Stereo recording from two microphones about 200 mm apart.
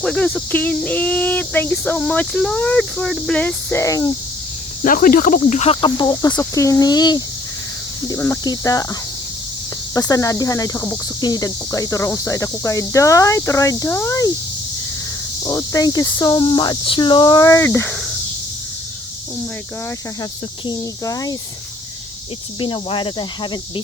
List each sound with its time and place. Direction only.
0.0 s speech: 5° left (ahead or behind)
4.8 s speech: 45° left (ahead or behind); by 8.9 s 15° left (ahead or behind)
9.9 s speech: 15° left (ahead or behind)
15.4 s speech: 15° left (ahead or behind)
20.7 s speech: 15° left (ahead or behind)
22.6 s speech: 25° left (ahead or behind)